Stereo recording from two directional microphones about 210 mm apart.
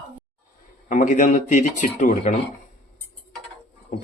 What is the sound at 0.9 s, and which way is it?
A man's voice, 40° left (ahead or behind).